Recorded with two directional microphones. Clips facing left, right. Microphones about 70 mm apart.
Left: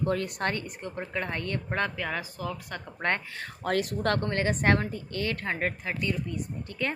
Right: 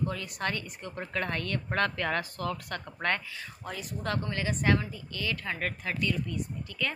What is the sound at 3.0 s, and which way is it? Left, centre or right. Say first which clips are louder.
Speech: left 2 dB; left.